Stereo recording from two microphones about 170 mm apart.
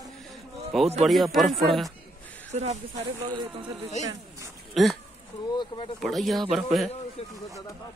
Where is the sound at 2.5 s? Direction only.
40° right (ahead or behind).